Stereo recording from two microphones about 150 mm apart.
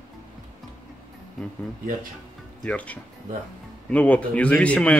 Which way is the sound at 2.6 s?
10° left (ahead or behind).